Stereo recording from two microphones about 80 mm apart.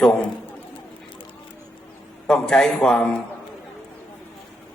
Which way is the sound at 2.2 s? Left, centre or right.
Centre.